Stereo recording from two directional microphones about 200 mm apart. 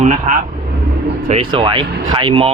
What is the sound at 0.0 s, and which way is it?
Speech, 35° right (ahead or behind).